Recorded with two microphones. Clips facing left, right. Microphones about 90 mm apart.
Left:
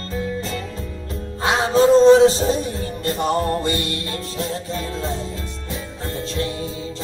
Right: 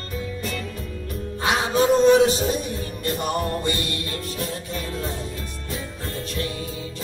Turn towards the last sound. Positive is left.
turn(degrees=25)  # may be behind; listen again after turning